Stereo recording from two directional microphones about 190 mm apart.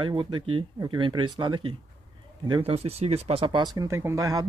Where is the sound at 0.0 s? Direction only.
25° right (ahead or behind).